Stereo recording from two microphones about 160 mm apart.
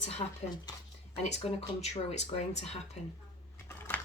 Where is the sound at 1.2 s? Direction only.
40° left (ahead or behind).